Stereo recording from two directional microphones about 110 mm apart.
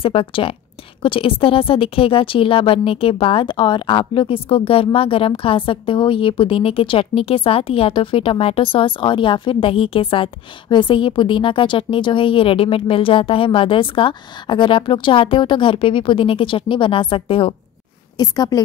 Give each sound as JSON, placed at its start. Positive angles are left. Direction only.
{"t": 0.0, "sound": "a woman's voice", "side_deg": 55}
{"t": 18.1, "sound": "a woman's voice", "side_deg": 35}